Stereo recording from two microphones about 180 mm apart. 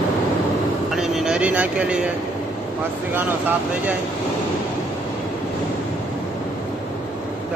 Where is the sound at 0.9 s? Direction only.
Centre (ahead or behind).